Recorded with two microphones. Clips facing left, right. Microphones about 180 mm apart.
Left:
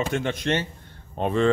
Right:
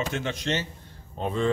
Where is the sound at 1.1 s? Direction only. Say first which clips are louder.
Left 5 dB; 70° left (ahead or behind).